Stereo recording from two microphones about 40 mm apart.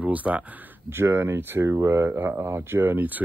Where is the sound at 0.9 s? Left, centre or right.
Right.